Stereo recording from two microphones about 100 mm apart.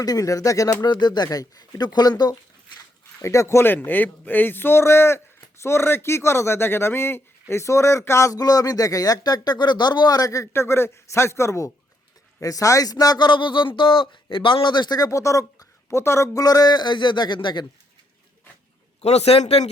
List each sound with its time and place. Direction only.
0.0 s speech: 40° left (ahead or behind)
3.2 s speech: 30° left (ahead or behind); by 17.7 s 50° left (ahead or behind)
19.0 s a man's voice: 90° left